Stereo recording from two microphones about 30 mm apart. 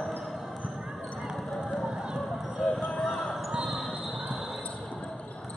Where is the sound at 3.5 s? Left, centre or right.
Centre.